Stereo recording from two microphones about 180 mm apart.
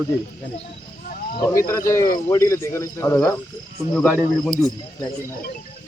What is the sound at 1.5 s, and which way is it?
Speech, 15° left (ahead or behind).